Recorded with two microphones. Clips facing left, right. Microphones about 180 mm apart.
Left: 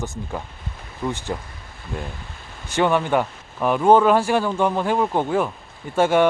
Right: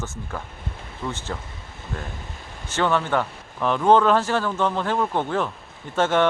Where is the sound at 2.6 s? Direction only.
15° left (ahead or behind).